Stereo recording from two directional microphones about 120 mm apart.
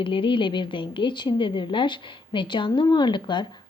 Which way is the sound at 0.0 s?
45° left (ahead or behind).